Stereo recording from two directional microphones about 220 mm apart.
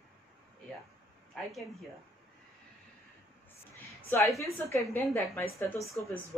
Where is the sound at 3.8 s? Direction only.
15° left (ahead or behind).